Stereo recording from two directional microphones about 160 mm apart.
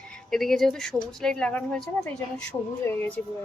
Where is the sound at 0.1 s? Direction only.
Centre (ahead or behind).